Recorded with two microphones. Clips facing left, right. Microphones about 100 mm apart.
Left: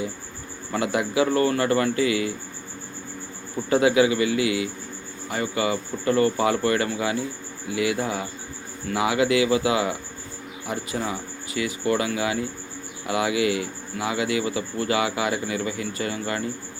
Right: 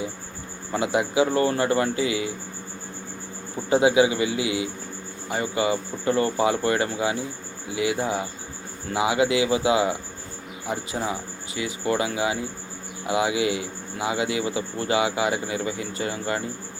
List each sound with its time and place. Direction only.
0.7 s speech: 20° right (ahead or behind)
3.7 s speech: 20° right (ahead or behind)